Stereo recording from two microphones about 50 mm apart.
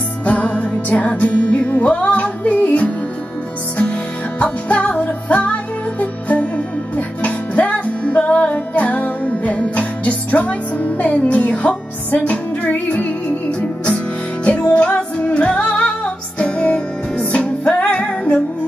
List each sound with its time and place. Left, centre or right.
0.2 s music: left
4.4 s music: left